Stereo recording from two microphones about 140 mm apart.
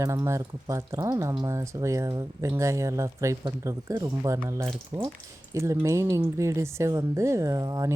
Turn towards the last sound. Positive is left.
turn(degrees=-25)  # may be behind; listen again after turning